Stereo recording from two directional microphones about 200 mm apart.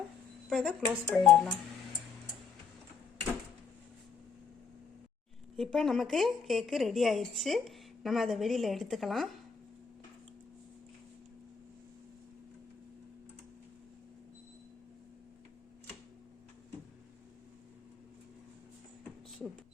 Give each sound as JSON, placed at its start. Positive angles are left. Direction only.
{"t": 0.5, "sound": "speech", "side_deg": 5}
{"t": 5.5, "sound": "speech", "side_deg": 0}